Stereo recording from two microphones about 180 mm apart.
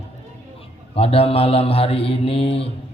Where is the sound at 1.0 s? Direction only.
30° left (ahead or behind).